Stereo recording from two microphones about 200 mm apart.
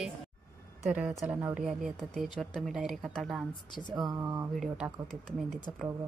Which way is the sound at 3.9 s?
20° right (ahead or behind).